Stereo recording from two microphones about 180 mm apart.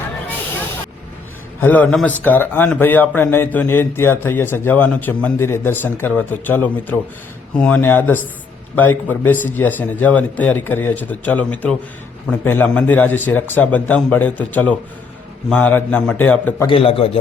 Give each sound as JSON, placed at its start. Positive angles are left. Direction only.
{"t": 1.6, "sound": "a man's voice", "side_deg": 10}
{"t": 16.6, "sound": "a man's voice", "side_deg": 30}